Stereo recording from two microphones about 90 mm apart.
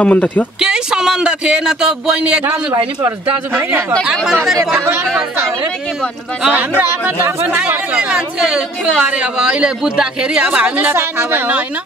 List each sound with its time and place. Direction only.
0.0 s speech: 15° left (ahead or behind)
0.6 s speech: 10° right (ahead or behind)
4.0 s speech: 5° right (ahead or behind)
6.5 s speech: 20° right (ahead or behind)